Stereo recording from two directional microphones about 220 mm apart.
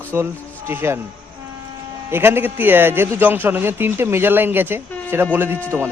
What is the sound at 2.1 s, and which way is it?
A man's voice, 10° right (ahead or behind).